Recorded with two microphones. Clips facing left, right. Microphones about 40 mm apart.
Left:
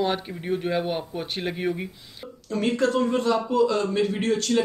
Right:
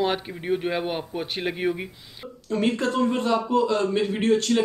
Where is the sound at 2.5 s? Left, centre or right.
Right.